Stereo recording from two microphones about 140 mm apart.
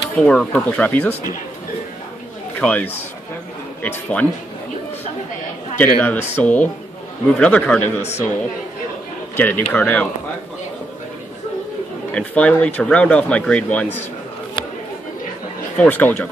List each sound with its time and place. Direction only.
0.1 s speech: 10° left (ahead or behind)
2.6 s speech: 10° left (ahead or behind)
5.8 s speech: 15° left (ahead or behind)
8.0 s a man's voice: 50° left (ahead or behind)
9.4 s speech: 10° left (ahead or behind)
12.1 s speech: 10° left (ahead or behind)
15.8 s speech: 10° left (ahead or behind)